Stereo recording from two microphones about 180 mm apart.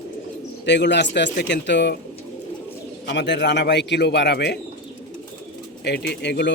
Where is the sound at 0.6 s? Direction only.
75° left (ahead or behind).